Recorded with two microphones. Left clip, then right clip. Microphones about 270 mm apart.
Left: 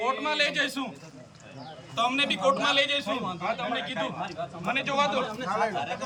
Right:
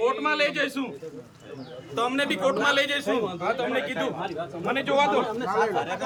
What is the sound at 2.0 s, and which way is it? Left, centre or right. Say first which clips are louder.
A man's voice: right 1 dB; centre.